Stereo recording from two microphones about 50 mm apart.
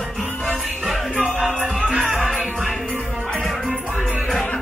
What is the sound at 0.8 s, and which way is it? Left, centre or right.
Music, centre.